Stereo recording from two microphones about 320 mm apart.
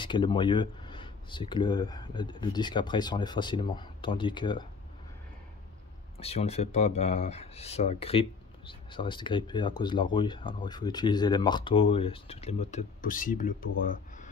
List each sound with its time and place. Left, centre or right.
0.0 s speech: centre
6.1 s speech: centre
13.8 s a sound: left